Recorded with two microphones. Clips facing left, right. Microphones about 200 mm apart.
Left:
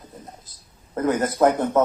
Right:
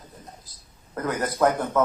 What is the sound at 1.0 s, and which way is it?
Speech, 25° left (ahead or behind).